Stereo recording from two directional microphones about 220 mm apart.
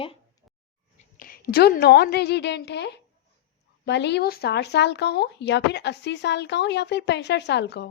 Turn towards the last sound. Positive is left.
turn(degrees=50)  # may be behind; listen again after turning